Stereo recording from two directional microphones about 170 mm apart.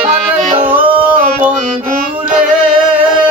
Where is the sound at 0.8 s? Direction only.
30° right (ahead or behind).